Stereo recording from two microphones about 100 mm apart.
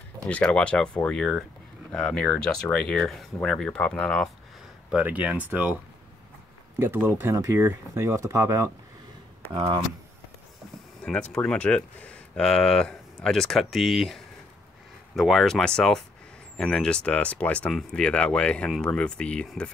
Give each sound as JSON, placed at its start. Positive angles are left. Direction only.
{"t": 0.3, "sound": "speech", "side_deg": 10}
{"t": 4.9, "sound": "speech", "side_deg": -15}
{"t": 6.8, "sound": "speech", "side_deg": -20}
{"t": 9.5, "sound": "speech", "side_deg": -60}
{"t": 11.1, "sound": "speech", "side_deg": 10}